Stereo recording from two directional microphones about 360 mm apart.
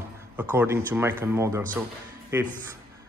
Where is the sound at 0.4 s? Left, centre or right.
Centre.